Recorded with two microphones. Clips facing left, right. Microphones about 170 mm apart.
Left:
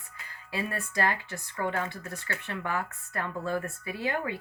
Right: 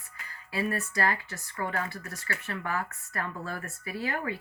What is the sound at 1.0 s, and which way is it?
Speech, 20° left (ahead or behind).